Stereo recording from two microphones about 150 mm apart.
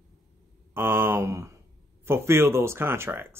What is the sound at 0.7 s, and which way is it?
Speech, 15° right (ahead or behind).